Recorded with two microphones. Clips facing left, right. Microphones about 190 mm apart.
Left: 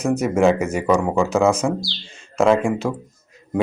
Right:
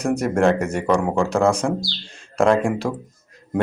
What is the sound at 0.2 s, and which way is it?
Speech, 5° left (ahead or behind).